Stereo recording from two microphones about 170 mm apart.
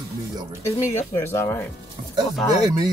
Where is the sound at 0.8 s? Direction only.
15° left (ahead or behind).